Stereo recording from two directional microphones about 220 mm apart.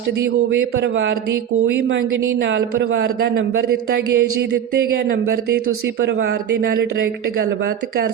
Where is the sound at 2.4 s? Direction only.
55° right (ahead or behind).